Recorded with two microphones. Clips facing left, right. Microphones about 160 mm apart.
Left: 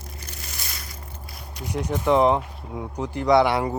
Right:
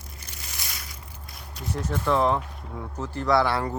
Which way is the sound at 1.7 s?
15° left (ahead or behind).